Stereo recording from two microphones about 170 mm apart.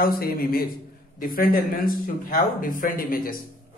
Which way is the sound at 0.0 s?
60° left (ahead or behind).